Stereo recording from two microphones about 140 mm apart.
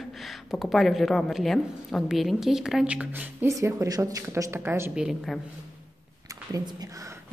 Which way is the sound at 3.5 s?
20° right (ahead or behind).